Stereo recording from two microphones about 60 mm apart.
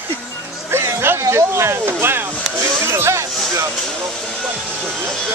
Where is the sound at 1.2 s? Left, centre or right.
Right.